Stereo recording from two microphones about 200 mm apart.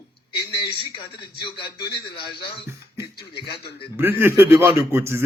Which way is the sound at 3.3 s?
55° left (ahead or behind).